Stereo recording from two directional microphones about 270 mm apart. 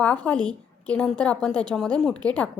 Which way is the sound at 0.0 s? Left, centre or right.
Centre.